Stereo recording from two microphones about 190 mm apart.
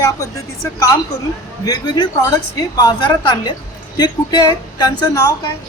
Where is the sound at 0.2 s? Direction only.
15° left (ahead or behind).